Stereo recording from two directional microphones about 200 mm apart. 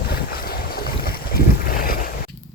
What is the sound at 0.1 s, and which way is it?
Boat, 50° left (ahead or behind).